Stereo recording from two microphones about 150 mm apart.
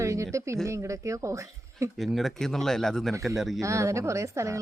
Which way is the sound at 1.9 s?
Centre (ahead or behind).